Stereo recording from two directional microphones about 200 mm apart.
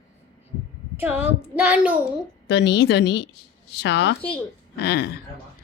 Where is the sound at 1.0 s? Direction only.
10° right (ahead or behind).